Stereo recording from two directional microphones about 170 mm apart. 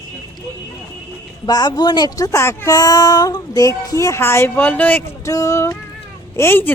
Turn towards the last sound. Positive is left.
turn(degrees=15)  # may be behind; listen again after turning